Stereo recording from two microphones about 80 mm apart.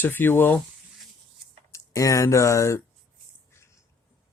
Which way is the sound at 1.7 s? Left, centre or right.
Left.